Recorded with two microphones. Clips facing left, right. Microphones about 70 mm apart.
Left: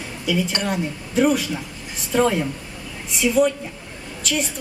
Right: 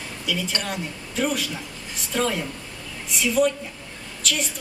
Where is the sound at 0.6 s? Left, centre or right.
Centre.